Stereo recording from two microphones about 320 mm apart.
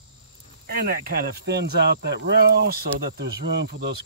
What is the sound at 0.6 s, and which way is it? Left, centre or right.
Speech, right.